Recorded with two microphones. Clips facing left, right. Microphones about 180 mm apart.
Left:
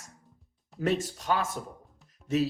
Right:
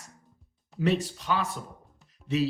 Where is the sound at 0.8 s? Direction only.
45° left (ahead or behind).